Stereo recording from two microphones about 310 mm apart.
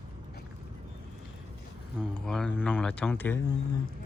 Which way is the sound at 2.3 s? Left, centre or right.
Centre.